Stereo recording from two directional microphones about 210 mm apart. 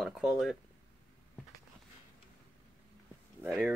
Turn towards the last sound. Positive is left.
turn(degrees=-10)  # may be behind; listen again after turning